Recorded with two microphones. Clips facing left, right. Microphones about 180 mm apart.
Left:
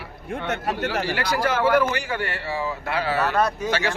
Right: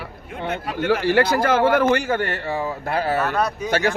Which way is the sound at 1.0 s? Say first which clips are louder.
Right 8 dB; 50° right (ahead or behind).